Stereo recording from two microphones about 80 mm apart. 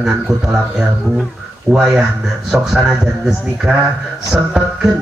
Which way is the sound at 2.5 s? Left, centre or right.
Centre.